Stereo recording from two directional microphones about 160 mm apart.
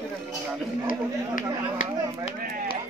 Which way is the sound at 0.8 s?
55° left (ahead or behind).